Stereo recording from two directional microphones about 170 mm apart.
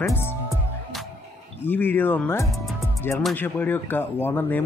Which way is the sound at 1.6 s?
10° left (ahead or behind).